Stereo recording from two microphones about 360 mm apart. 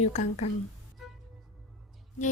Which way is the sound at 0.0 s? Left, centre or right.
Centre.